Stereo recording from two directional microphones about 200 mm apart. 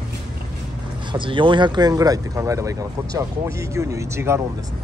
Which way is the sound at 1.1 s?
25° right (ahead or behind).